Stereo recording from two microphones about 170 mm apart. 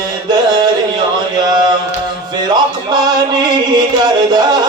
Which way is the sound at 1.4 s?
25° right (ahead or behind).